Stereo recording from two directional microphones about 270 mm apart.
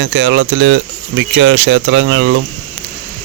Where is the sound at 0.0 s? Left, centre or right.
Right.